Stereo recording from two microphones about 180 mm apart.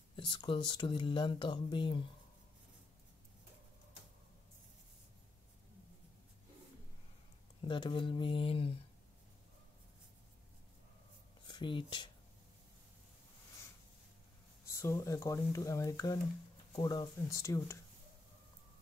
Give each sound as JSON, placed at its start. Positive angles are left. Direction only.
{"t": 0.1, "sound": "speech", "side_deg": 30}
{"t": 7.6, "sound": "speech", "side_deg": 30}
{"t": 11.4, "sound": "speech", "side_deg": 25}
{"t": 14.7, "sound": "speech", "side_deg": 15}